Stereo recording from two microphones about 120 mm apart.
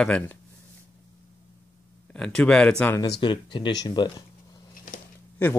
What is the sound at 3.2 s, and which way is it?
Speech, 40° left (ahead or behind).